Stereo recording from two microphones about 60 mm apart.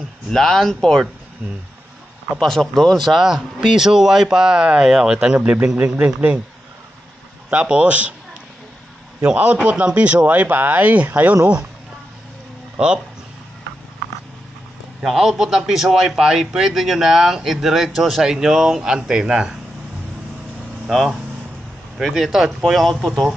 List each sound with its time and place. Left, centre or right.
0.3 s speech: centre
2.3 s speech: centre
3.1 s a man's voice: centre; by 6.4 s right
7.4 s a man's voice: centre
9.2 s a man's voice: centre
12.7 s speech: centre
15.0 s speech: centre
20.9 s speech: centre